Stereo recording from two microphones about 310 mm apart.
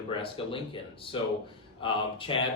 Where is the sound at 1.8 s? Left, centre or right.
Centre.